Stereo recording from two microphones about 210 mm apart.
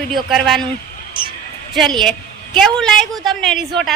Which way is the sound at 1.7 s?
Centre (ahead or behind).